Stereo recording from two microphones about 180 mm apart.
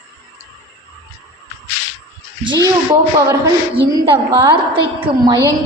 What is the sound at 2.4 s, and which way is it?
Speech, 25° right (ahead or behind).